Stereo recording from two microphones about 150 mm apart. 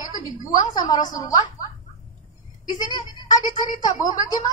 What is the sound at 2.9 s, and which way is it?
A woman's voice, 25° left (ahead or behind).